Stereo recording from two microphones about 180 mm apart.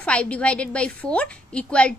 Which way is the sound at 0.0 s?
5° left (ahead or behind).